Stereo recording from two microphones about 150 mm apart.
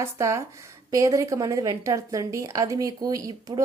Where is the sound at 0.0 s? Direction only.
20° right (ahead or behind).